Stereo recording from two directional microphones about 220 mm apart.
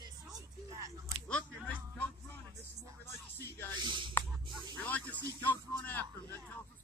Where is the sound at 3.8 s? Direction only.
20° right (ahead or behind).